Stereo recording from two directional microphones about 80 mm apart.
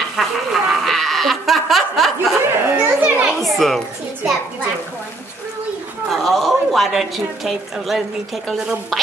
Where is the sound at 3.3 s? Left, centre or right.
Centre.